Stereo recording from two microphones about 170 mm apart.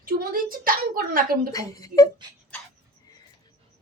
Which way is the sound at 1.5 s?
20° left (ahead or behind).